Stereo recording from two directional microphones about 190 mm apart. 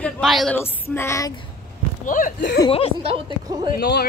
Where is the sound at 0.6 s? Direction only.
10° left (ahead or behind).